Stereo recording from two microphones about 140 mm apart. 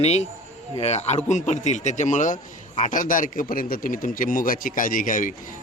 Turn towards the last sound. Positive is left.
turn(degrees=75)  # may be behind; listen again after turning